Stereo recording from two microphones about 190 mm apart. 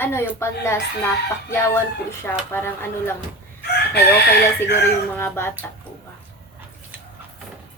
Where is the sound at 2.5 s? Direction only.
10° left (ahead or behind).